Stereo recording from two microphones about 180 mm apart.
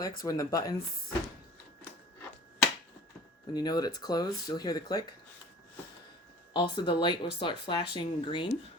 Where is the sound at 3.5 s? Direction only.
20° left (ahead or behind).